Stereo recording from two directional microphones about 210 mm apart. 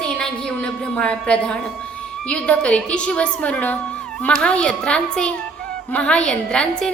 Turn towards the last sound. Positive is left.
turn(degrees=5)  # may be behind; listen again after turning